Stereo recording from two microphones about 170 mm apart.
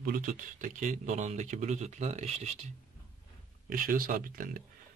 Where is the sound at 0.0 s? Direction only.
55° right (ahead or behind).